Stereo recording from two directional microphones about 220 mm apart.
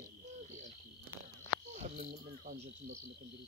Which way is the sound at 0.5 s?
35° right (ahead or behind).